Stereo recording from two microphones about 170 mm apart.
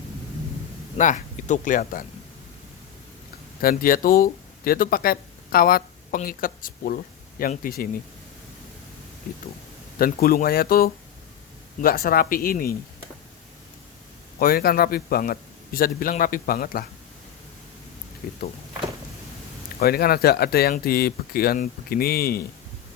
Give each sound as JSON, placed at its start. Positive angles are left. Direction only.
{"t": 0.9, "sound": "speech", "side_deg": 45}
{"t": 3.6, "sound": "speech", "side_deg": 60}
{"t": 10.0, "sound": "speech", "side_deg": 60}
{"t": 14.3, "sound": "speech", "side_deg": 60}
{"t": 18.2, "sound": "speech", "side_deg": 60}
{"t": 19.8, "sound": "speech", "side_deg": 65}